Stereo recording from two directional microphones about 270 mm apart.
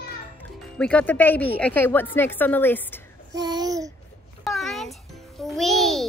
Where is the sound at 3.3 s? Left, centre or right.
Centre.